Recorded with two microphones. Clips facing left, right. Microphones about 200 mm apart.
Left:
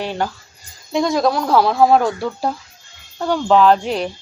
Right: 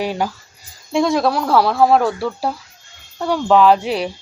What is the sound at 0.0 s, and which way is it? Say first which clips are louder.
Speech: right 2 dB; 10° right (ahead or behind).